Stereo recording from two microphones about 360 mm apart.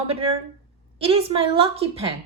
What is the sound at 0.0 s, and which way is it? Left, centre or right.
Speech, centre.